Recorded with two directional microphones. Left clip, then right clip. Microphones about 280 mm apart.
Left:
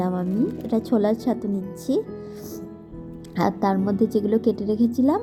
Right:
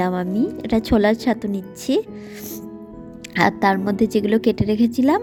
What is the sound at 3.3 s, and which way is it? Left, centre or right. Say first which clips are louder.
A woman's voice: right 5 dB; right.